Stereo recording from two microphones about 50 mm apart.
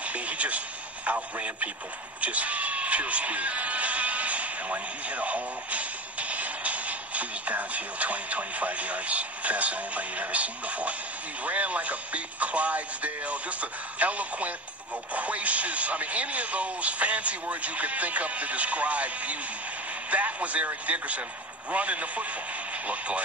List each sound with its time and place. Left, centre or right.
0.0 s radio: right
2.2 s speech: right